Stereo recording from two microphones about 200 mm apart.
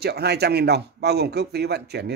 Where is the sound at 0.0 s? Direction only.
55° right (ahead or behind).